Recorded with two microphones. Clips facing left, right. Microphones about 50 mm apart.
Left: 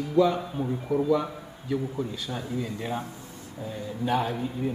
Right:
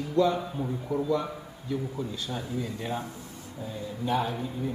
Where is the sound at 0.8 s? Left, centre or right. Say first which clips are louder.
Left 4 dB; left.